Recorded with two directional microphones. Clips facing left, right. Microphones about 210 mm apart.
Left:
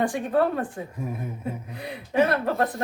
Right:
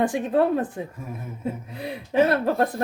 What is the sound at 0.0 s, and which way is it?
Speech, 20° right (ahead or behind).